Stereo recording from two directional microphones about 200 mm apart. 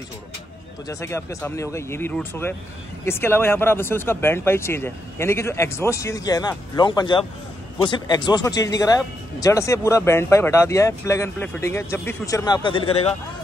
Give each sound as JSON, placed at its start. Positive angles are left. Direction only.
{"t": 0.8, "sound": "speech", "side_deg": 15}